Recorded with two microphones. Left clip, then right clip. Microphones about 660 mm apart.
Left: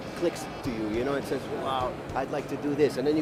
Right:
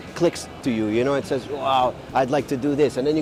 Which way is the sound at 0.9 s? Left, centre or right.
Right.